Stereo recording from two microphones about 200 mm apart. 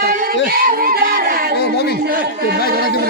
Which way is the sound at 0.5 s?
45° right (ahead or behind).